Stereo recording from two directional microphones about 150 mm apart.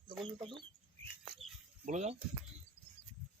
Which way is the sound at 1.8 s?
50° right (ahead or behind).